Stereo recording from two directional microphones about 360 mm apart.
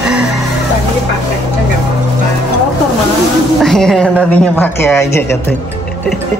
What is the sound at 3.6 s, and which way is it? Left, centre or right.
A woman's voice, centre.